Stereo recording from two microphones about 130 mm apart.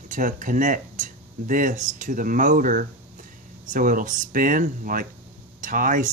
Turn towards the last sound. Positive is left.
turn(degrees=-90)